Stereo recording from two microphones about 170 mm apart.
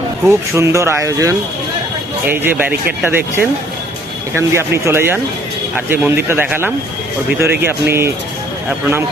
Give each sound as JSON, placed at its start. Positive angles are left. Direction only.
{"t": 0.3, "sound": "speech", "side_deg": -15}